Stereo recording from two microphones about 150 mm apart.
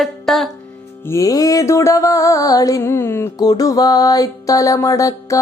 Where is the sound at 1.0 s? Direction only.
20° left (ahead or behind).